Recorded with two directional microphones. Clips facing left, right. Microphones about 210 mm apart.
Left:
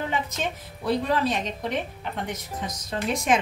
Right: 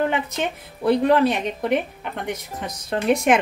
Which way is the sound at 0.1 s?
60° right (ahead or behind).